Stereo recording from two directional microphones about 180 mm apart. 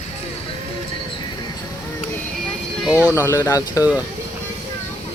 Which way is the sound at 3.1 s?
15° left (ahead or behind).